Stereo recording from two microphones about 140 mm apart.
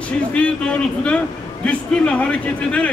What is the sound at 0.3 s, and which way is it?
Speech, 10° left (ahead or behind).